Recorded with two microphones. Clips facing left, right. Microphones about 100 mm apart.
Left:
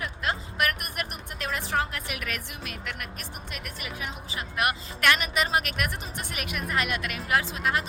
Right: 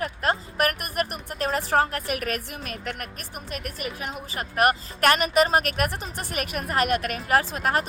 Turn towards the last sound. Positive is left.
turn(degrees=-45)  # may be behind; listen again after turning